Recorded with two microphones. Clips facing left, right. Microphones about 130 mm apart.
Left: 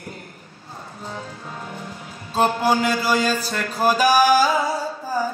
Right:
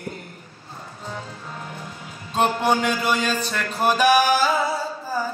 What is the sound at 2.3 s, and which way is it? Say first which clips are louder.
A man's voice: left 1 dB; 35° left (ahead or behind).